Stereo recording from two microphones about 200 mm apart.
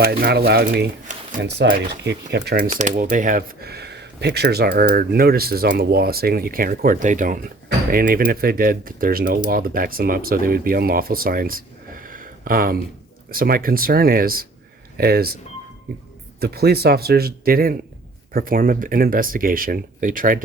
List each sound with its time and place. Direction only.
0.0 s speech: 50° right (ahead or behind)
1.1 s a sound: 40° right (ahead or behind)
1.7 s speech: 55° right (ahead or behind)
16.4 s speech: 50° right (ahead or behind)